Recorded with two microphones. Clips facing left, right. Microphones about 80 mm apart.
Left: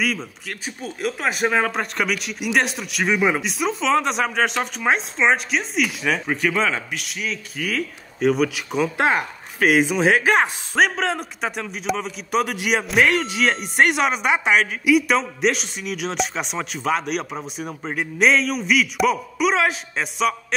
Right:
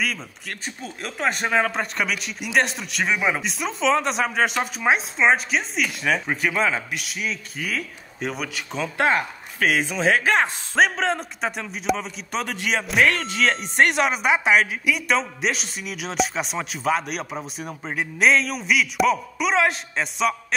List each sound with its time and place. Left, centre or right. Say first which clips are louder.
0.0 s speech: left 3 dB; centre
10.8 s speech: even; centre
12.8 s speech: left 1 dB; centre